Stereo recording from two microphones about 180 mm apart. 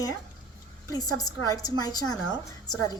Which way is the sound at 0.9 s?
20° left (ahead or behind).